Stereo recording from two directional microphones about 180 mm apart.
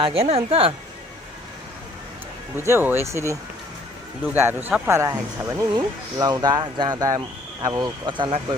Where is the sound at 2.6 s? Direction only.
15° right (ahead or behind).